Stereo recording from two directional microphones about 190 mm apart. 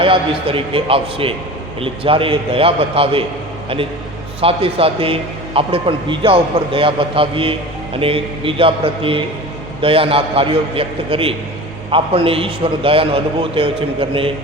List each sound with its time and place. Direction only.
0.0 s a man's voice: 30° right (ahead or behind)
4.4 s a man's voice: 30° right (ahead or behind)